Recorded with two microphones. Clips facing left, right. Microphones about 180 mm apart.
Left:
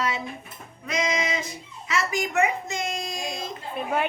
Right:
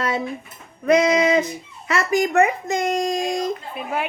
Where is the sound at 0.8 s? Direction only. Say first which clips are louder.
Right 11 dB; 55° right (ahead or behind).